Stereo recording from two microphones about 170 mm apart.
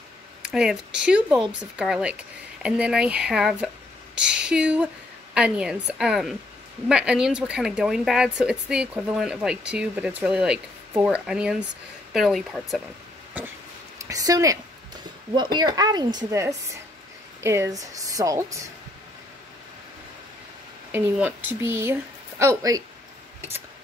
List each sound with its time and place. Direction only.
0.4 s speech: 5° right (ahead or behind)
13.4 s a sound: 10° right (ahead or behind)
13.9 s a woman's voice: 20° right (ahead or behind)
20.9 s a woman's voice: 10° right (ahead or behind)